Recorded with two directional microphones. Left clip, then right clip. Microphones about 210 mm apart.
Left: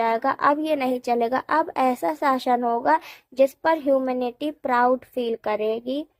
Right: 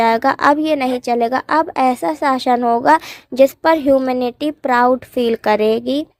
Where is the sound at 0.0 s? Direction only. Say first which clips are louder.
Right 7 dB; 40° right (ahead or behind).